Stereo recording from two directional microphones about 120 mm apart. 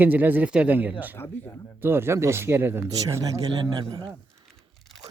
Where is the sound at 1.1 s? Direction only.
20° left (ahead or behind).